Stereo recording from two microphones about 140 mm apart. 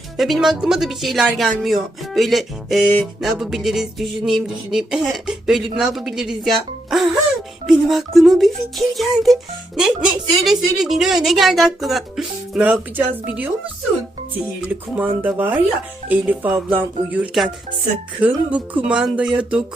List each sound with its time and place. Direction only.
0.2 s a sound: centre (ahead or behind)
13.2 s speech: 10° right (ahead or behind)
14.6 s speech: 10° right (ahead or behind)